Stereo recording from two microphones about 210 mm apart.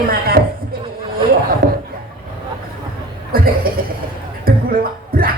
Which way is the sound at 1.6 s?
60° right (ahead or behind).